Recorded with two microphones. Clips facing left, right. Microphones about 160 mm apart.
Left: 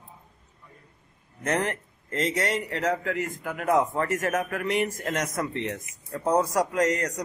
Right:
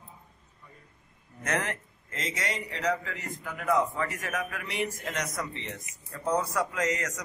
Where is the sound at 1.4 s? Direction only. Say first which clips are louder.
Left 4 dB; 30° left (ahead or behind).